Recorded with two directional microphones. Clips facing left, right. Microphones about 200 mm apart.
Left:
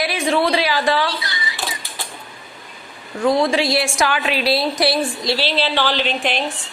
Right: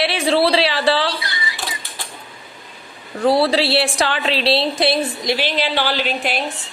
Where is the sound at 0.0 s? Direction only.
30° right (ahead or behind).